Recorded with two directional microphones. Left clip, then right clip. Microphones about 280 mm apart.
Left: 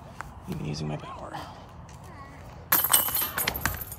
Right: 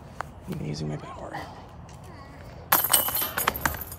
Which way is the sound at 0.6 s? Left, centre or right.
Left.